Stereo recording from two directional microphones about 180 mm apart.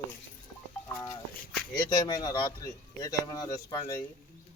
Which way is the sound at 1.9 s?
20° left (ahead or behind).